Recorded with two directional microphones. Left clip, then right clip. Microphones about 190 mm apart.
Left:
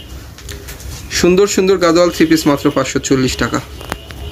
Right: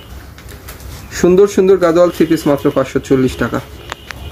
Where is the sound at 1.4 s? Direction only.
10° right (ahead or behind).